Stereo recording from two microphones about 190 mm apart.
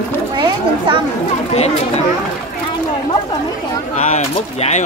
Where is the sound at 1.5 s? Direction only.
35° left (ahead or behind).